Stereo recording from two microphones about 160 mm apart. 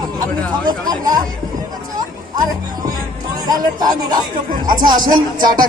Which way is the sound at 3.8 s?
25° right (ahead or behind).